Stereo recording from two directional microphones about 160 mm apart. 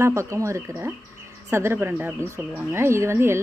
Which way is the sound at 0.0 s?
20° right (ahead or behind).